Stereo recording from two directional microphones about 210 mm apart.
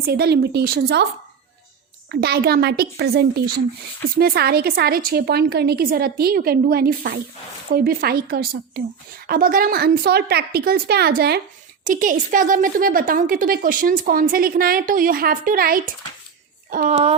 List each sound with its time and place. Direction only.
0.0 s a woman's voice: 50° right (ahead or behind)
2.0 s a woman's voice: 50° right (ahead or behind)
11.9 s a woman's voice: 40° right (ahead or behind)